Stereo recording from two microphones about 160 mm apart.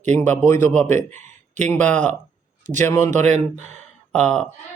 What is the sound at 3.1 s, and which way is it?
Speech, 45° right (ahead or behind).